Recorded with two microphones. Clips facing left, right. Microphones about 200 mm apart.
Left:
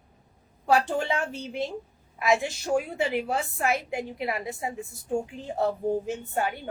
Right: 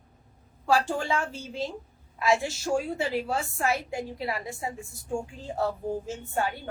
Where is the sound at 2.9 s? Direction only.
20° left (ahead or behind).